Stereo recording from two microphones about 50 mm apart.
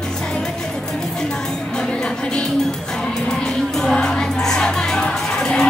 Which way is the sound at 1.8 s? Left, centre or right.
Centre.